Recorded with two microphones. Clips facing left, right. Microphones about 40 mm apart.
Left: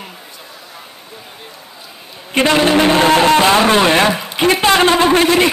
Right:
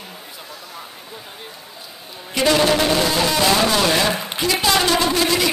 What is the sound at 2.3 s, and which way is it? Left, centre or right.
A man's voice, left.